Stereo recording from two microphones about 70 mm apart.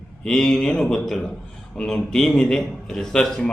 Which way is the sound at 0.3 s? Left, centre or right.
Centre.